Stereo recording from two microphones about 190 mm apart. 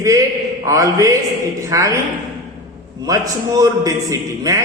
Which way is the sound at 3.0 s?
20° right (ahead or behind).